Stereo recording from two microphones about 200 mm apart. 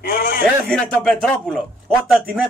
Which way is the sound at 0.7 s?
5° left (ahead or behind).